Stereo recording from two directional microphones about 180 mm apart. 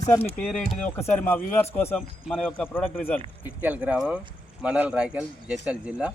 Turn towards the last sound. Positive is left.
turn(degrees=-5)  # may be behind; listen again after turning